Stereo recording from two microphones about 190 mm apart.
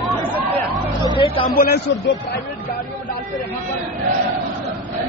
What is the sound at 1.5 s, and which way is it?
Speech, 50° left (ahead or behind).